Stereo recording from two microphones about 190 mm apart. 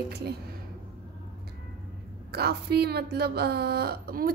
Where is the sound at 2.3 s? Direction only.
55° right (ahead or behind).